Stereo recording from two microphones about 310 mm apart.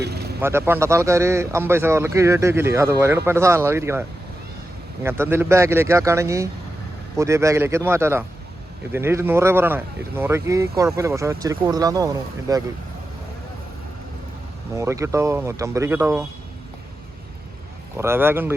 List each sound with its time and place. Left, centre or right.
0.0 s vehicle: right
0.4 s speech: centre
5.0 s speech: centre
14.8 s speech: centre
17.9 s speech: centre